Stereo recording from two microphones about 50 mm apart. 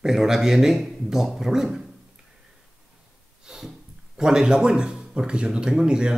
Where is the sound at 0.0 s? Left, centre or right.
Centre.